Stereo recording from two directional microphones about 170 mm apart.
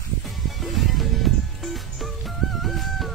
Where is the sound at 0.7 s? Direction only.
Centre (ahead or behind).